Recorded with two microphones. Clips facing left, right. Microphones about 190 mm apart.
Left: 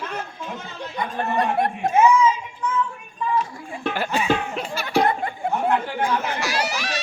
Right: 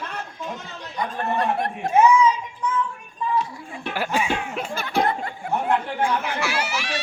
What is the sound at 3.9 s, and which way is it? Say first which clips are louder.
Music: left 1 dB; 10° right (ahead or behind).